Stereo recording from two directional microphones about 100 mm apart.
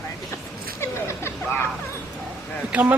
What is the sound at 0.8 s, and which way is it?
Speech, 25° left (ahead or behind).